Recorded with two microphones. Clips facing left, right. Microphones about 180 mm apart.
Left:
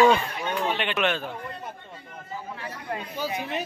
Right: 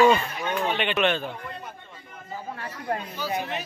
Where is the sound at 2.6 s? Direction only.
45° right (ahead or behind).